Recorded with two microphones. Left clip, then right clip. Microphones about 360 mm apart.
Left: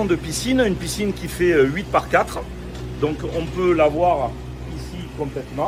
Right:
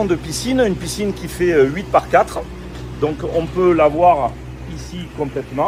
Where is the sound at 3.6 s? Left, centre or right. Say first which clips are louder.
Right 4 dB; centre.